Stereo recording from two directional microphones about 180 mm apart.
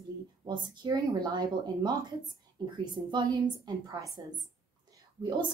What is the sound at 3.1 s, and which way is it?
A woman's voice, 25° right (ahead or behind).